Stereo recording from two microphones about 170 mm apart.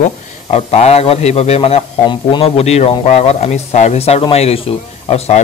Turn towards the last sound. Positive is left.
turn(degrees=40)  # may be behind; listen again after turning